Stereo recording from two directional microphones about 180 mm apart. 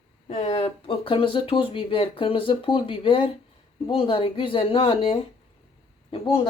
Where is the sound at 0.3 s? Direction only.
35° left (ahead or behind).